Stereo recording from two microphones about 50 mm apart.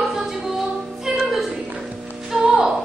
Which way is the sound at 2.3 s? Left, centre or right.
Centre.